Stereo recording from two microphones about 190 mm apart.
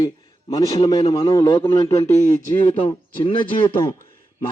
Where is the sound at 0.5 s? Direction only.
25° left (ahead or behind).